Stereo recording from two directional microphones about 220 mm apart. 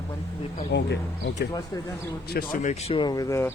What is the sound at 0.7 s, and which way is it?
Speech, 50° left (ahead or behind).